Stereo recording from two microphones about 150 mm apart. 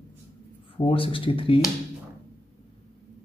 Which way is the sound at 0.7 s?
35° left (ahead or behind).